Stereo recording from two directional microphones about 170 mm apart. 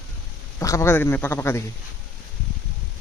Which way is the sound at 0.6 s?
15° left (ahead or behind).